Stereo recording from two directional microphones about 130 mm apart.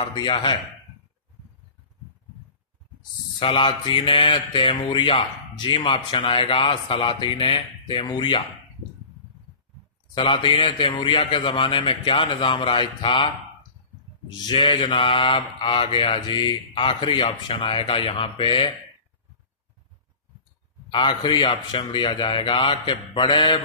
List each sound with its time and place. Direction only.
0.0 s speech: 35° left (ahead or behind)
3.3 s speech: 40° left (ahead or behind)
10.1 s speech: 40° left (ahead or behind)
14.4 s speech: 40° left (ahead or behind)
20.9 s speech: 35° left (ahead or behind)